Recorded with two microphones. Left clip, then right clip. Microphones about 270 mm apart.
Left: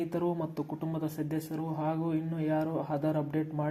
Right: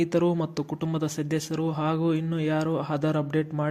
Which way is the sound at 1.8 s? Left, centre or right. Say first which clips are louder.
Right 5 dB; right.